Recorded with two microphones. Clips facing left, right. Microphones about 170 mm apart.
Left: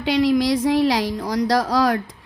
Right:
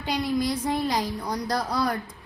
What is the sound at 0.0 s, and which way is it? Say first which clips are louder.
A woman's voice: left 8 dB; 90° left.